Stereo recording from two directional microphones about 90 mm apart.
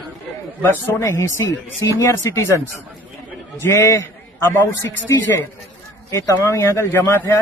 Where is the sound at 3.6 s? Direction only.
30° left (ahead or behind).